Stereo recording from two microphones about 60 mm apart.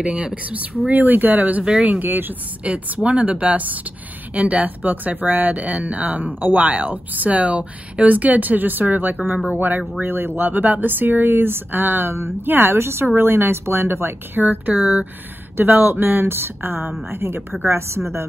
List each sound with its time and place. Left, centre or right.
0.0 s speech: centre
1.6 s speech: centre
2.0 s speech: right
2.6 s speech: right
17.6 s speech: right